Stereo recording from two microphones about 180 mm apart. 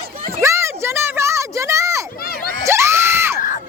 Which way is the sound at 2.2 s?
55° left (ahead or behind).